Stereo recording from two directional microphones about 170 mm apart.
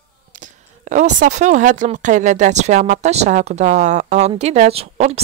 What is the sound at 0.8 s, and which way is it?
Speech, 45° right (ahead or behind).